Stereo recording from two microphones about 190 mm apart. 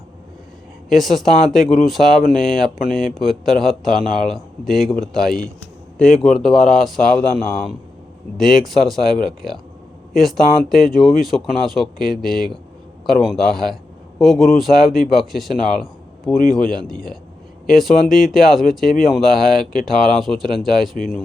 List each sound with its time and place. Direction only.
0.9 s speech: centre (ahead or behind)
16.4 s a man's voice: 50° left (ahead or behind)
17.7 s speech: centre (ahead or behind)